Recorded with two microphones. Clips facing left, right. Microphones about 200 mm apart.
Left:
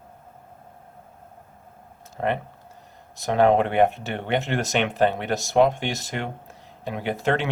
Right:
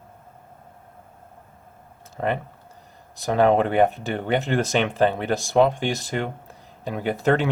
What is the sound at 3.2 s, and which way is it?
Speech, 35° right (ahead or behind).